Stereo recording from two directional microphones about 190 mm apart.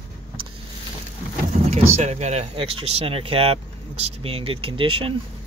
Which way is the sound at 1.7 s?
35° right (ahead or behind).